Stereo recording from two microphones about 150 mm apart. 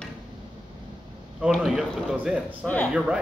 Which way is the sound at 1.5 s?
5° right (ahead or behind).